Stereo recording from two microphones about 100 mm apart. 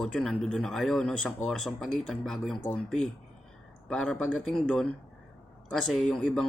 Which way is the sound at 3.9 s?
5° left (ahead or behind).